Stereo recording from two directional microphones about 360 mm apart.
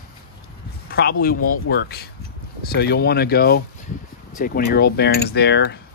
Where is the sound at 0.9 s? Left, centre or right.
Left.